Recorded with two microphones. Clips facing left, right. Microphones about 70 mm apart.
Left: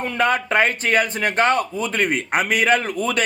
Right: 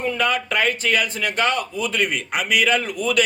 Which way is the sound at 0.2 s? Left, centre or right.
Left.